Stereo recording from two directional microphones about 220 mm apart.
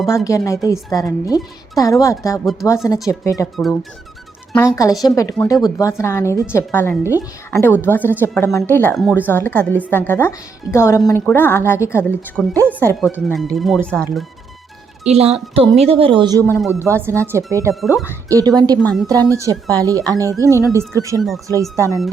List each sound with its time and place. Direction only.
0.3 s speech: 15° left (ahead or behind)
3.5 s speech: centre (ahead or behind)
4.5 s speech: 10° left (ahead or behind)
12.5 s speech: 10° right (ahead or behind)
15.0 s speech: 30° right (ahead or behind)
16.4 s speech: 5° left (ahead or behind)
17.0 s speech: 10° right (ahead or behind)
20.4 s speech: 15° left (ahead or behind)
20.7 s speech: 15° right (ahead or behind)
21.2 s speech: centre (ahead or behind)
21.4 s speech: 15° right (ahead or behind)